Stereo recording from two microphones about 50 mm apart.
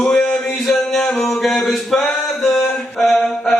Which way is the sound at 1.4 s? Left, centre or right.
Centre.